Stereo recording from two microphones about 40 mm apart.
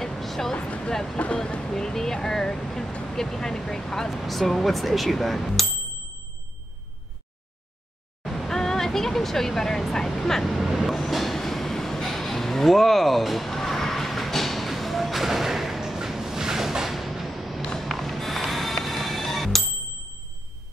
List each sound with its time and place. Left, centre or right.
0.0 s a sound: centre
0.6 s speech: left
1.6 s speech: centre
4.1 s speech: centre
8.2 s vehicle: centre
10.5 s vehicle: centre
11.0 s a sound: centre
17.6 s a sound: centre
17.8 s rub: centre
18.9 s music: centre